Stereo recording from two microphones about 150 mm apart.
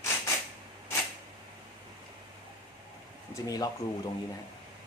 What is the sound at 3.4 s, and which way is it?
Speech, 25° left (ahead or behind).